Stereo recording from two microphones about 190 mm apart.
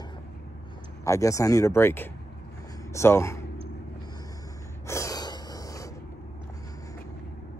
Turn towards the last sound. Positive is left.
turn(degrees=20)  # may be behind; listen again after turning